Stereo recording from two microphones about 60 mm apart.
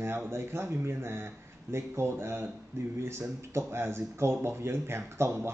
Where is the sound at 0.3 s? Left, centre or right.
Right.